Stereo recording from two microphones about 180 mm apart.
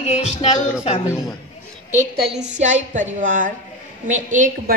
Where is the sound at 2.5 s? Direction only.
40° right (ahead or behind).